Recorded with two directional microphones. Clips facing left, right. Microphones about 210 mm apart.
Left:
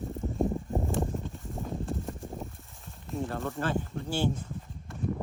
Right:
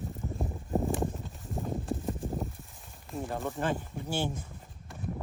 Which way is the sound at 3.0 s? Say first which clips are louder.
Left 3 dB; centre (ahead or behind).